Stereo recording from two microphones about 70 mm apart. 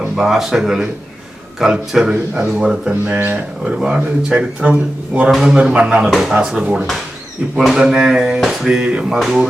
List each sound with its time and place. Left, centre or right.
0.3 s speech: centre
2.9 s a man's voice: right
5.3 s speech: centre
6.1 s speech: centre
7.6 s speech: centre
9.1 s speech: centre